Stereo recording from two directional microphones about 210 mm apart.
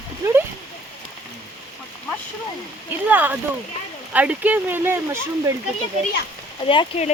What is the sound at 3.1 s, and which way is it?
Speech, 10° right (ahead or behind).